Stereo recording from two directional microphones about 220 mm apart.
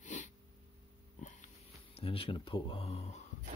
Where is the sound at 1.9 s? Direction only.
25° left (ahead or behind).